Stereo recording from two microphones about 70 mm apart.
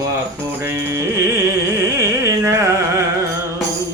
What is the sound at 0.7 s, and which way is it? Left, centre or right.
Carnatic music, right.